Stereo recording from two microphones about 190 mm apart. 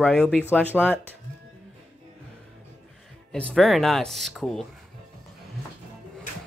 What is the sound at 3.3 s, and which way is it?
Speech, centre (ahead or behind).